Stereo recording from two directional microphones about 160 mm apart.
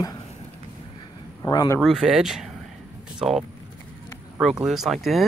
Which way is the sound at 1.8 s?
Centre (ahead or behind).